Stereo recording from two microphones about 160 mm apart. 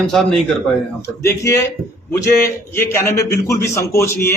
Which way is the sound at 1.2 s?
15° left (ahead or behind).